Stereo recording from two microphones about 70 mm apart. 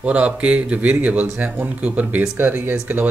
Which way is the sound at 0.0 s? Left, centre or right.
Centre.